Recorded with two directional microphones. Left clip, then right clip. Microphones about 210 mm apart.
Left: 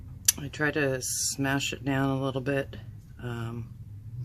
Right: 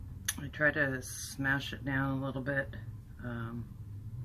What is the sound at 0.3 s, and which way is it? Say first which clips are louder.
Speech: left 2 dB; 55° left (ahead or behind).